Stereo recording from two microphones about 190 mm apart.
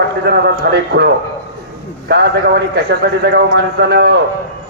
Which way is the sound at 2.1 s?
60° right (ahead or behind).